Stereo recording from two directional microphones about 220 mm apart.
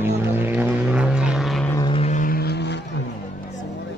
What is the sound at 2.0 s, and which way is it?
Vehicle, 35° left (ahead or behind).